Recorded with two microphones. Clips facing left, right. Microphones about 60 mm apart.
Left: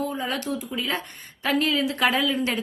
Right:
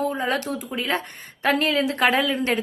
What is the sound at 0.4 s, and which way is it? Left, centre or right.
A woman's voice, right.